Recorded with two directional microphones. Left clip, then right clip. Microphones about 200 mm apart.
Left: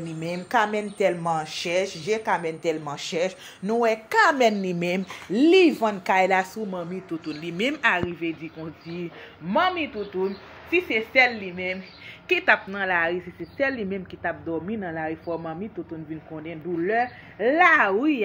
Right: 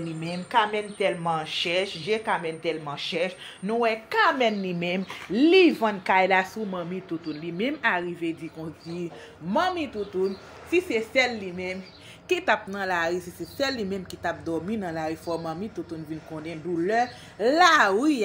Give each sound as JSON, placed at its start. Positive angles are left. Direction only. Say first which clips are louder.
{"t": 0.2, "sound": "a woman's voice", "louder": "left 1 dB", "side_deg": 20}